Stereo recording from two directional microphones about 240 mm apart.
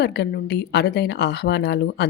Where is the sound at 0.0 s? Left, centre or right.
Left.